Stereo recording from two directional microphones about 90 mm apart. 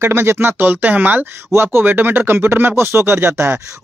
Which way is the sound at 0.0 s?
25° right (ahead or behind).